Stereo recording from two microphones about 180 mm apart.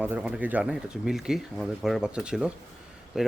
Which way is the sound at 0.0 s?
5° right (ahead or behind).